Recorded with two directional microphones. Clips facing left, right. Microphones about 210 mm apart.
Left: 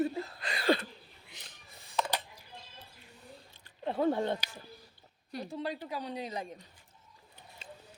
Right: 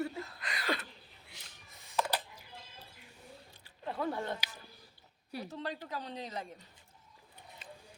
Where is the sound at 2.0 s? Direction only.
5° right (ahead or behind).